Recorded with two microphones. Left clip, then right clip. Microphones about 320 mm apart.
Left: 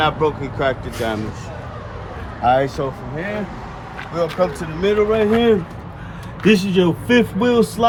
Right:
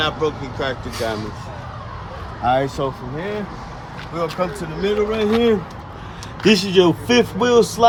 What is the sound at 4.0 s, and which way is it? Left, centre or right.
Vehicle, centre.